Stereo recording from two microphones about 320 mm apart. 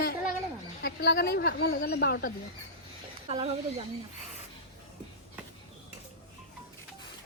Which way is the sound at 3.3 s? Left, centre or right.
Centre.